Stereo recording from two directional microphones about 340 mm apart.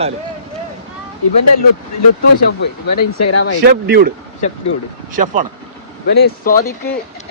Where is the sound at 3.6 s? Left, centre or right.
Right.